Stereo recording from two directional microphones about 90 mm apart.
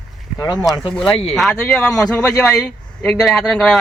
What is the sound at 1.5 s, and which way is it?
Speech, 20° left (ahead or behind).